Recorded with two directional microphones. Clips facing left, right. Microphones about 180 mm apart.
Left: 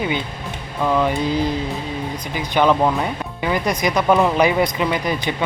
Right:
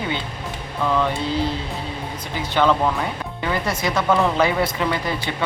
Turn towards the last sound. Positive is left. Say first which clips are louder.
# left 3 dB
turn(degrees=15)  # may be behind; listen again after turning